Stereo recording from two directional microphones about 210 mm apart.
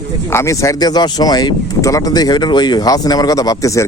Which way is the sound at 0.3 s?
15° left (ahead or behind).